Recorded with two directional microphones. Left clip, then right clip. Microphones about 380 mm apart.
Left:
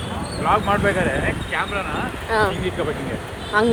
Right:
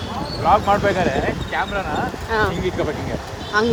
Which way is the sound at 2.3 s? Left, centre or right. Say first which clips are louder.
Left 1 dB; centre.